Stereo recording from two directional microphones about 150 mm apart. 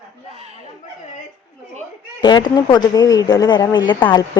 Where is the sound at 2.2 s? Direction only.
30° left (ahead or behind).